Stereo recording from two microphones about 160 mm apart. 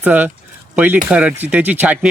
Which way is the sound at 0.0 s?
10° right (ahead or behind).